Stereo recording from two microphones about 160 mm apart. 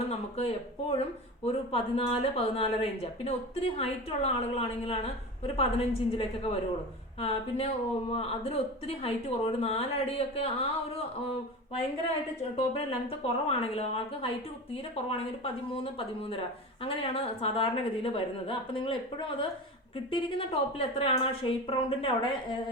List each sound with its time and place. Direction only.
0.1 s speech: 40° left (ahead or behind)
15.7 s speech: 35° left (ahead or behind)